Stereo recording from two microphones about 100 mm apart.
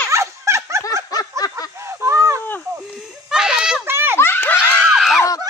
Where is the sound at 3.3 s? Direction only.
5° right (ahead or behind).